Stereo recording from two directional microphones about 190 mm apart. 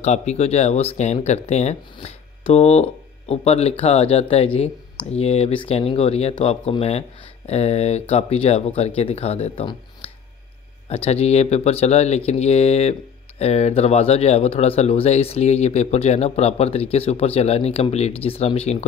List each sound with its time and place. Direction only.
0.0 s speech: 35° left (ahead or behind)